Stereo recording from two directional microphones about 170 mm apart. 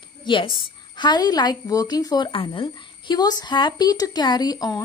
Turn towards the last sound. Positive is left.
turn(degrees=20)  # may be behind; listen again after turning